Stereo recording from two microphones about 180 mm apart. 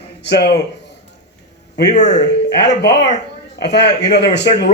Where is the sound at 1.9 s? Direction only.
40° left (ahead or behind).